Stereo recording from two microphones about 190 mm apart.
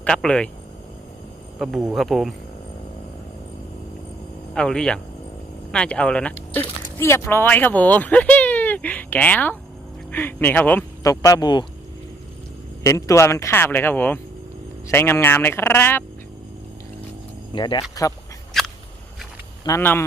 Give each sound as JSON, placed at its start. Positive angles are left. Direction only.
{"t": 0.0, "sound": "speech", "side_deg": 5}
{"t": 1.5, "sound": "speech", "side_deg": 0}
{"t": 4.5, "sound": "speech", "side_deg": 5}
{"t": 12.8, "sound": "speech", "side_deg": 15}
{"t": 17.5, "sound": "speech", "side_deg": 25}
{"t": 18.5, "sound": "biting", "side_deg": 0}
{"t": 19.6, "sound": "speech", "side_deg": 15}